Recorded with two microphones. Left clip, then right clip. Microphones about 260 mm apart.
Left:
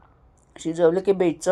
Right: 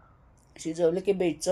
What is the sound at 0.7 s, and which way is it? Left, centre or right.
Speech, centre.